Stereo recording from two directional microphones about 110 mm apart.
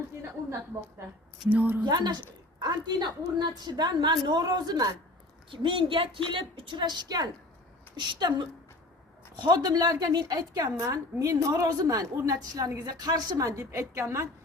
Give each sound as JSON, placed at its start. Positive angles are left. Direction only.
{"t": 1.5, "sound": "speech", "side_deg": -15}
{"t": 1.8, "sound": "a woman's voice", "side_deg": -40}
{"t": 5.5, "sound": "a woman's voice", "side_deg": -50}
{"t": 9.3, "sound": "a woman's voice", "side_deg": -45}